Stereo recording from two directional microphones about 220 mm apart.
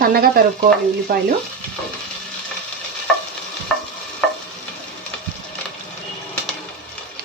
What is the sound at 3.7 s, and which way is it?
Stir, 5° left (ahead or behind).